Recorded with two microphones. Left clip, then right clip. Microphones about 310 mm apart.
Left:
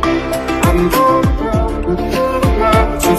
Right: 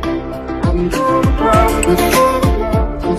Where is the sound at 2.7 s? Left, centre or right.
Left.